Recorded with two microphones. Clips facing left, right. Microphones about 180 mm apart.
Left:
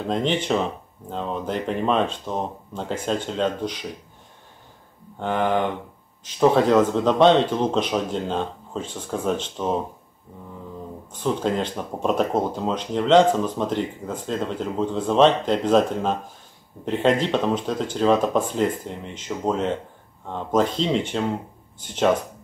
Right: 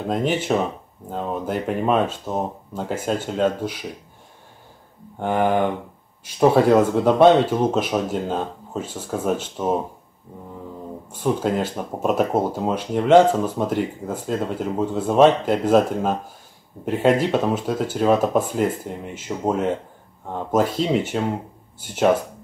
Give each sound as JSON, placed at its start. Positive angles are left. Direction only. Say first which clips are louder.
{"t": 0.1, "sound": "speech", "louder": "right 1 dB", "side_deg": -5}
{"t": 5.2, "sound": "speech", "louder": "right 2 dB", "side_deg": -10}
{"t": 11.1, "sound": "speech", "louder": "right 2 dB", "side_deg": -10}